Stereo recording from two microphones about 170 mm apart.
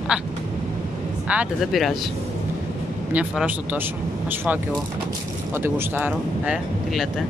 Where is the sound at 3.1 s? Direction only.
10° right (ahead or behind).